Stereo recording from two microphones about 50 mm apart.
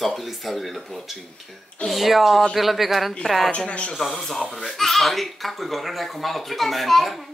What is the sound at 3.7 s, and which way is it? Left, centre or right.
Speech, left.